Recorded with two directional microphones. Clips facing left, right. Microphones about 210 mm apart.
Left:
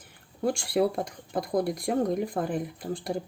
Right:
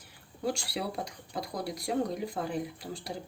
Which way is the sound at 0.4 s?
50° left (ahead or behind).